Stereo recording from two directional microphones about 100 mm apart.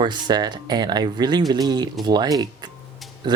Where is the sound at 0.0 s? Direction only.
45° right (ahead or behind).